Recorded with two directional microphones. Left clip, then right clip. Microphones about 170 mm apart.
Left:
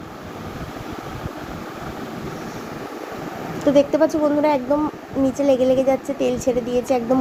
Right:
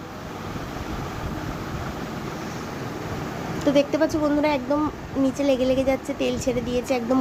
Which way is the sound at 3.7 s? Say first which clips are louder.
Left 5 dB; 10° left (ahead or behind).